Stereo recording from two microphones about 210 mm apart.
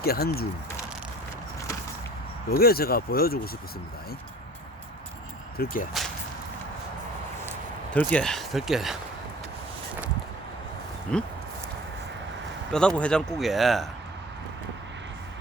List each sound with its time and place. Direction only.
0.0 s speech: 45° left (ahead or behind)
2.5 s speech: 45° left (ahead or behind)
5.5 s speech: 40° left (ahead or behind)
7.9 s speech: 5° left (ahead or behind)
11.1 s speech: 5° left (ahead or behind)
12.7 s speech: 5° left (ahead or behind)